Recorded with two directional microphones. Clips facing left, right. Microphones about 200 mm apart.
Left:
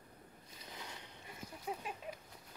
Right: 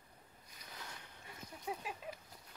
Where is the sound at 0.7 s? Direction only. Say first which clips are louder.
Left 2 dB; 20° left (ahead or behind).